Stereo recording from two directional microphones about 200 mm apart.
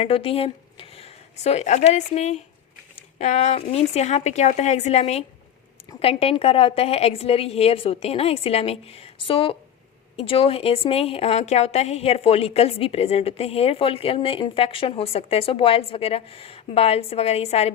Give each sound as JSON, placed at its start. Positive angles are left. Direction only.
{"t": 0.0, "sound": "a woman's voice", "side_deg": 30}